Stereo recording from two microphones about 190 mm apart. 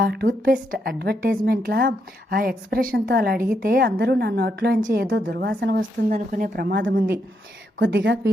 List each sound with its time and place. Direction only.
0.0 s a woman's voice: 55° right (ahead or behind)
6.1 s a woman's voice: 45° right (ahead or behind); by 8.3 s 65° right (ahead or behind)